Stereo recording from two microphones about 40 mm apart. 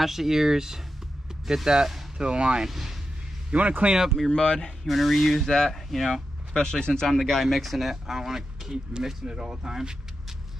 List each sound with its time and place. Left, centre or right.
0.0 s speech: centre
2.7 s speech: centre
3.5 s speech: right
4.3 s speech: centre
4.8 s speech: centre
6.5 s speech: centre